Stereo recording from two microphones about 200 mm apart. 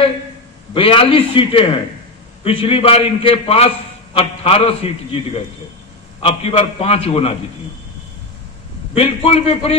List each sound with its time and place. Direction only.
0.7 s a man's voice: 25° left (ahead or behind)
8.9 s a man's voice: 30° left (ahead or behind)